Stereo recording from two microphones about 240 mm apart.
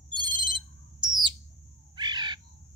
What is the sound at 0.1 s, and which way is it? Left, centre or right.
Ringtone, centre.